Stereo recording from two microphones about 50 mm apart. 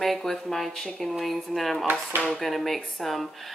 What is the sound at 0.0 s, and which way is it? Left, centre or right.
Speech, centre.